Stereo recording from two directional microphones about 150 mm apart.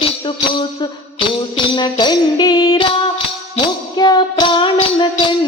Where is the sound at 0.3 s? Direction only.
35° left (ahead or behind).